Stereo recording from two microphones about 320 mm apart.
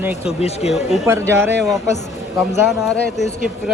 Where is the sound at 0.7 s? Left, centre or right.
Centre.